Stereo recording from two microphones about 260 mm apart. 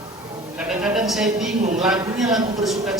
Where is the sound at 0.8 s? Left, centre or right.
Centre.